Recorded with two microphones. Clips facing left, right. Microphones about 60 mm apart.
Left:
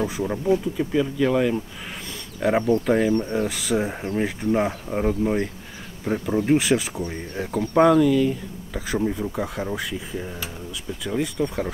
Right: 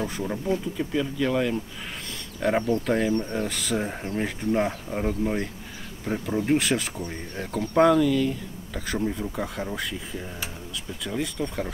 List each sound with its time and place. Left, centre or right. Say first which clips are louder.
0.0 s speech: left 4 dB; centre